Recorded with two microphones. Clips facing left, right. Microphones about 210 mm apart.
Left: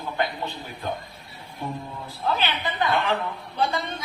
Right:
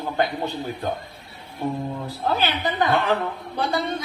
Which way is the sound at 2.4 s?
40° right (ahead or behind).